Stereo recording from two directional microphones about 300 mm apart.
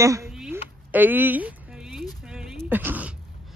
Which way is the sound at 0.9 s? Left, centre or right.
Centre.